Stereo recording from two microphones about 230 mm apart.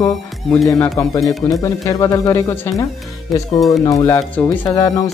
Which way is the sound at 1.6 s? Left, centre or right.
Centre.